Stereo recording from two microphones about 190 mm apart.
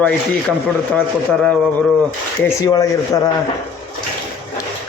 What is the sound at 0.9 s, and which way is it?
Speech, 5° left (ahead or behind).